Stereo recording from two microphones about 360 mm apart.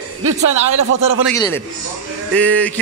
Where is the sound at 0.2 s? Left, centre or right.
Right.